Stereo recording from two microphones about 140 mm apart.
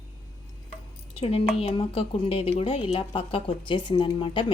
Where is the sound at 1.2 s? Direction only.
45° left (ahead or behind).